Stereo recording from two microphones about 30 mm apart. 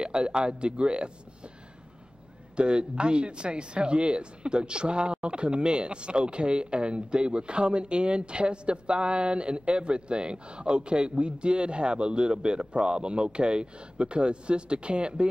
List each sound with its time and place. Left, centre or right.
0.0 s speech: right
2.5 s speech: right